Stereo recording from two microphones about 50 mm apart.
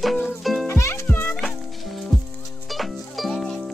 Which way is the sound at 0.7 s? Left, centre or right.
Left.